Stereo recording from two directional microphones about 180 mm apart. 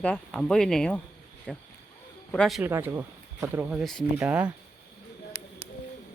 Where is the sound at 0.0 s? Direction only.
5° left (ahead or behind).